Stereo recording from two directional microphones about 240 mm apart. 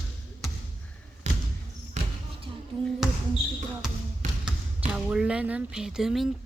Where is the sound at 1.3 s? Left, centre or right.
Right.